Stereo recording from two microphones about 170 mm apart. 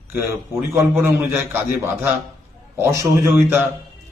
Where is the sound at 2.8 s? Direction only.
15° right (ahead or behind).